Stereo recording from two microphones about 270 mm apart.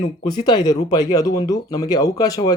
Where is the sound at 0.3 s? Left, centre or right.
Centre.